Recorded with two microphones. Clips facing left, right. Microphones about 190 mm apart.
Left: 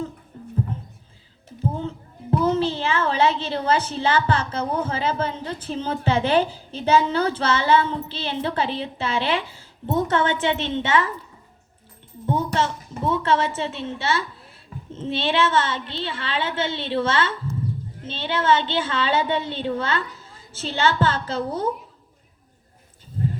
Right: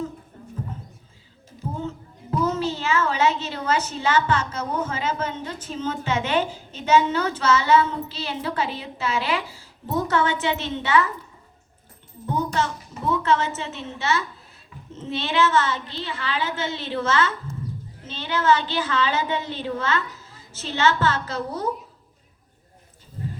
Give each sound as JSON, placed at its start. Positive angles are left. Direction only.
{"t": 2.4, "sound": "a woman's voice", "side_deg": 30}
{"t": 12.2, "sound": "a woman's voice", "side_deg": 25}